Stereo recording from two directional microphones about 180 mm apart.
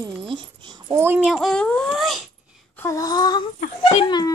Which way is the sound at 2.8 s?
20° left (ahead or behind).